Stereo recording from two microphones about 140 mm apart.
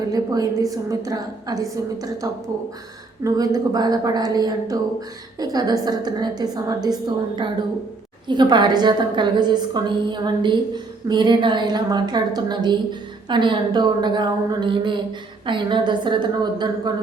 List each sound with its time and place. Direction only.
0.1 s a woman's voice: 25° right (ahead or behind)